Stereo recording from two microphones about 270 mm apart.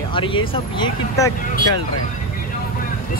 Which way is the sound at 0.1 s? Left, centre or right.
Centre.